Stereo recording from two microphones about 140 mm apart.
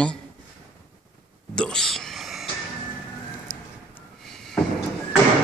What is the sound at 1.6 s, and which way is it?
Whispering, 5° left (ahead or behind).